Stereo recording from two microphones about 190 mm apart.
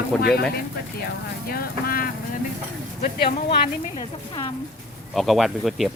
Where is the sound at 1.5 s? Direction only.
50° left (ahead or behind).